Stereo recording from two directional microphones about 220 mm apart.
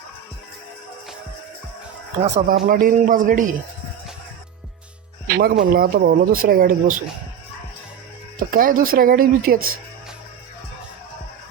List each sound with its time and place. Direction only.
2.2 s speech: 30° right (ahead or behind)
5.3 s speech: 45° right (ahead or behind)
8.4 s speech: 40° right (ahead or behind)